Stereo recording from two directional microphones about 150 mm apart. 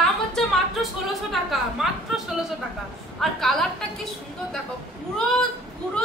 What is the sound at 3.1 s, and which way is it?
Speech, centre (ahead or behind).